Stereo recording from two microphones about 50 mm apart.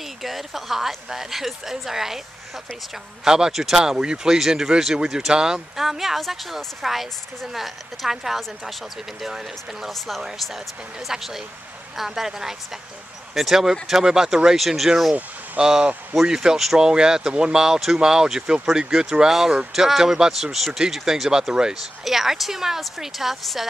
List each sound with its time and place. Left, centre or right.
0.2 s speech: centre
3.3 s speech: centre
15.6 s speech: centre